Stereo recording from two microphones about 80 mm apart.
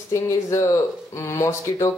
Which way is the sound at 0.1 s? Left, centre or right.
Left.